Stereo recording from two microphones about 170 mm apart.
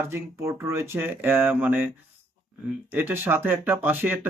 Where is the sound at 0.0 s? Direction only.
15° right (ahead or behind).